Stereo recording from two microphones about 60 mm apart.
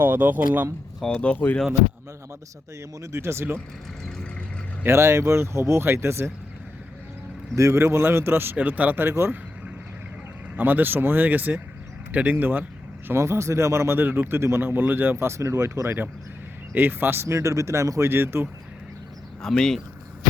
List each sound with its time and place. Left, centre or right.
0.0 s speech: right
1.0 s speech: centre
3.0 s speech: right
4.9 s speech: right
7.5 s speech: right
8.5 s speech: right
9.0 s speech: right
10.6 s speech: right
13.1 s speech: right
14.0 s speech: right
16.7 s speech: right
17.3 s speech: right
18.1 s speech: right
19.4 s speech: centre